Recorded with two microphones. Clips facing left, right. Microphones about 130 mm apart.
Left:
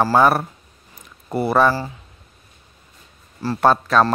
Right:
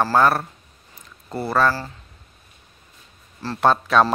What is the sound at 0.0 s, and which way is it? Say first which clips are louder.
A man's voice: left 2 dB; 10° left (ahead or behind).